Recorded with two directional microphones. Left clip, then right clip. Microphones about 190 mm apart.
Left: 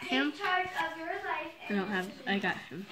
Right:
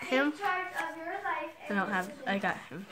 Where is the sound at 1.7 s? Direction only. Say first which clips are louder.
Right 3 dB; 50° right (ahead or behind).